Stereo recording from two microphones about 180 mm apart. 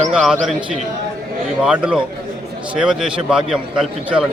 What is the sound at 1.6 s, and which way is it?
A man's voice, 5° right (ahead or behind).